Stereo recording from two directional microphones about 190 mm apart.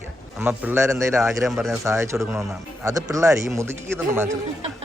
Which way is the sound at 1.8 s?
15° right (ahead or behind).